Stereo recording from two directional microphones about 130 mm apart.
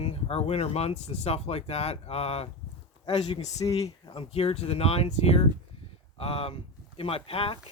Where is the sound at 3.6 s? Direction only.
25° left (ahead or behind).